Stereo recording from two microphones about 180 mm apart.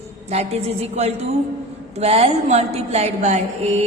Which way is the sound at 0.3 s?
35° right (ahead or behind).